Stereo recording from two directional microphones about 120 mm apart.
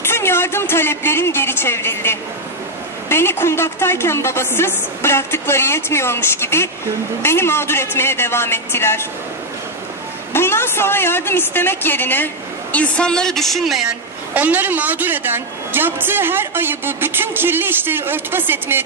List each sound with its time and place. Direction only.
0.0 s a woman's voice: 20° left (ahead or behind)
10.3 s a woman's voice: 20° left (ahead or behind); by 18.9 s 20° right (ahead or behind)